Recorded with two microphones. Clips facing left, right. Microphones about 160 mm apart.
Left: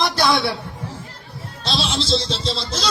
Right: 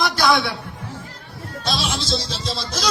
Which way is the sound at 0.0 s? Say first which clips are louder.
Even; 30° left (ahead or behind).